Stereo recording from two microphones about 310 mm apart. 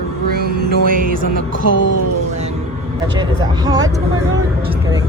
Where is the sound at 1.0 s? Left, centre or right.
Right.